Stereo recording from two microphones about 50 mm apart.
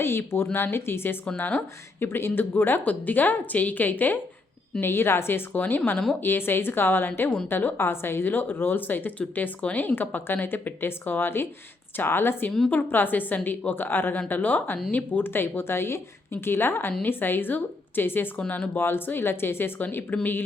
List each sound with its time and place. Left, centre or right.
0.0 s a woman's voice: left
1.4 s a woman's voice: left
2.0 s a woman's voice: left
4.8 s a woman's voice: left
5.5 s a woman's voice: left
9.6 s a woman's voice: left
9.8 s a woman's voice: left
18.3 s a woman's voice: left
18.8 s a woman's voice: left